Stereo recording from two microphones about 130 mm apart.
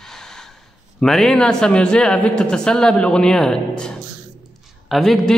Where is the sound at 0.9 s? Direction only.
5° left (ahead or behind).